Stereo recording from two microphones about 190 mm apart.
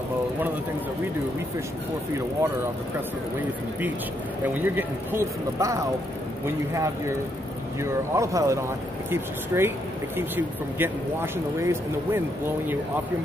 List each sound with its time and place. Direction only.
4.6 s speech: 10° right (ahead or behind)